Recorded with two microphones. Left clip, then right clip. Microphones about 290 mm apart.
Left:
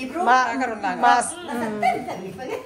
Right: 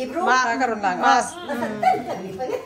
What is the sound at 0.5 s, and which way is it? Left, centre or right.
Speech, right.